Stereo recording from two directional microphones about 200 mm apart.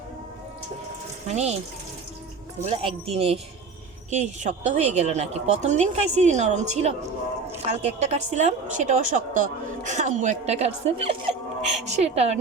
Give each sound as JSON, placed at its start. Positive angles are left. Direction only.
{"t": 1.3, "sound": "a woman's voice", "side_deg": -30}
{"t": 2.6, "sound": "a woman's voice", "side_deg": -30}